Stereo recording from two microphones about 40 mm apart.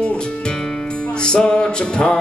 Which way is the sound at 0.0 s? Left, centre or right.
Left.